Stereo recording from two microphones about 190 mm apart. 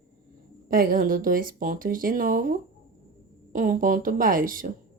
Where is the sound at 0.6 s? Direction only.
50° right (ahead or behind).